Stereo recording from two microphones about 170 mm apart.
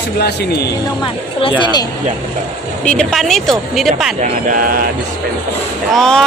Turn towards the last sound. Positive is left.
turn(degrees=5)  # may be behind; listen again after turning